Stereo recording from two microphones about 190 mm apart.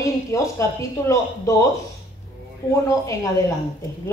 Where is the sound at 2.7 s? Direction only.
15° left (ahead or behind).